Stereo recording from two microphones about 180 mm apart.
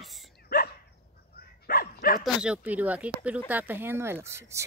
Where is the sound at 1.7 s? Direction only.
55° left (ahead or behind).